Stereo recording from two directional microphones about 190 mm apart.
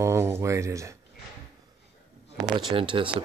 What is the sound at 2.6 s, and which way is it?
Speech, 25° right (ahead or behind).